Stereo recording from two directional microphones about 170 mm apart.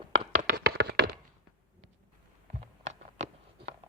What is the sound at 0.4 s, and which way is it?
Tap, 70° right (ahead or behind).